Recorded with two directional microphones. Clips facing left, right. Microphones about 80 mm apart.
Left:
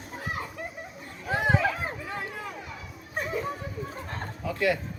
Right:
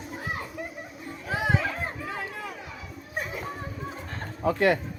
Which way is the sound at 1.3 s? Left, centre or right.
Centre.